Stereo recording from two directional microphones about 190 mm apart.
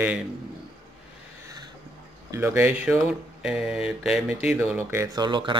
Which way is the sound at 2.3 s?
15° right (ahead or behind).